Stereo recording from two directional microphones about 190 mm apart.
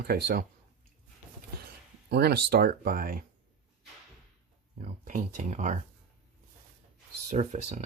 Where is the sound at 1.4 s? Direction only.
60° right (ahead or behind).